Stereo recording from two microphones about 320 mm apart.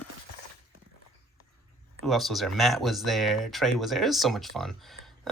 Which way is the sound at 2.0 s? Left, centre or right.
Centre.